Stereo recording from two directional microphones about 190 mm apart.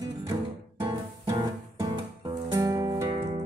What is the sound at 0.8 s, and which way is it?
Music, 25° right (ahead or behind).